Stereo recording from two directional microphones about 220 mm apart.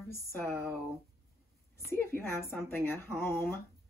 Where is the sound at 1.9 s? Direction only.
10° left (ahead or behind).